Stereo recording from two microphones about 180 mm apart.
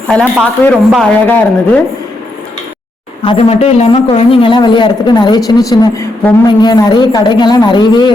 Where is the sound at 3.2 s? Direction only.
35° left (ahead or behind).